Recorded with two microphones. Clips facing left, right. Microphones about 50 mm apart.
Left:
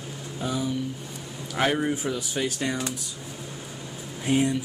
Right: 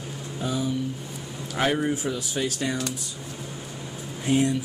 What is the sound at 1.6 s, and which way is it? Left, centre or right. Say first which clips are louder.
Speech: even; centre.